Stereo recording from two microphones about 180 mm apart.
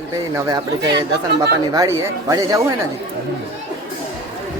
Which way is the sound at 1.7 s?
20° right (ahead or behind).